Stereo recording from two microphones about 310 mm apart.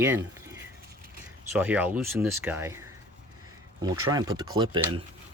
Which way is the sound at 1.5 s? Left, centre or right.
Centre.